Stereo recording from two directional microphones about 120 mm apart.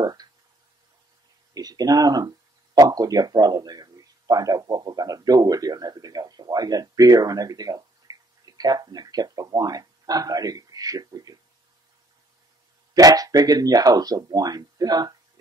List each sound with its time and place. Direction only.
0.0 s a sound: 35° right (ahead or behind)
1.5 s speech: 30° right (ahead or behind)
12.9 s speech: 30° right (ahead or behind)